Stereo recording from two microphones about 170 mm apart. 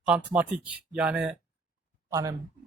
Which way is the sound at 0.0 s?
5° right (ahead or behind).